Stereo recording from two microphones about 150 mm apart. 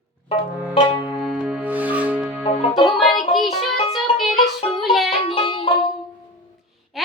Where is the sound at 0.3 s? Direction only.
35° left (ahead or behind).